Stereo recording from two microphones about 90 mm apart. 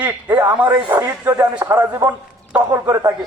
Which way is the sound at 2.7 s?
35° right (ahead or behind).